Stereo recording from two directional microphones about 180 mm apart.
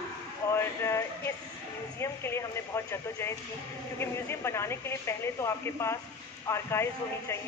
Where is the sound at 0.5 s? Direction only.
15° left (ahead or behind).